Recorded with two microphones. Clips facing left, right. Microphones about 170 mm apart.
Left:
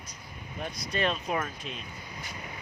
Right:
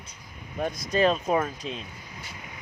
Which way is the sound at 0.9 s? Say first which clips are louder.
Right 7 dB; 35° right (ahead or behind).